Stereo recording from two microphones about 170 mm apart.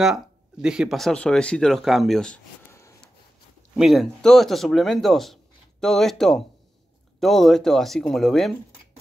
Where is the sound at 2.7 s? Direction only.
15° left (ahead or behind).